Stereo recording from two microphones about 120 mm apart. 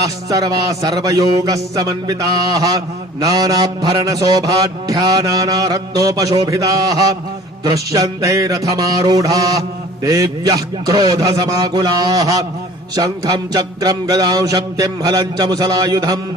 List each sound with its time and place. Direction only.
0.0 s a man's voice: 30° right (ahead or behind)
7.6 s music: 30° right (ahead or behind)